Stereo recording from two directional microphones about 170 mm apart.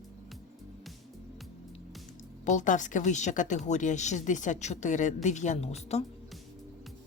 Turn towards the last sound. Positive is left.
turn(degrees=40)  # may be behind; listen again after turning